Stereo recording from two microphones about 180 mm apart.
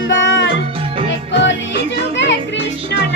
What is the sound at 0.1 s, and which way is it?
Music, 90° left.